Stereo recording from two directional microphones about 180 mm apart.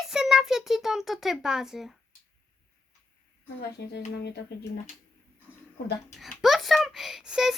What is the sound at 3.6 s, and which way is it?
Speech, 65° left (ahead or behind).